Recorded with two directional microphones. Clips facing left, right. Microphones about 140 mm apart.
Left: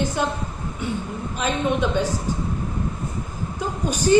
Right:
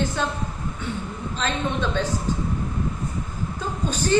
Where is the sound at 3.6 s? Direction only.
10° left (ahead or behind).